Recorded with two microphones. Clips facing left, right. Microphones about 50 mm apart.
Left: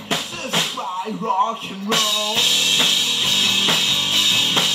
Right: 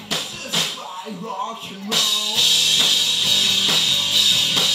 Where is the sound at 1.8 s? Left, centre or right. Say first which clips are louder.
Left 3 dB; left.